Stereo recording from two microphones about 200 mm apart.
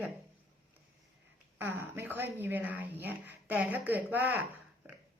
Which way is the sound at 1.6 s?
10° right (ahead or behind).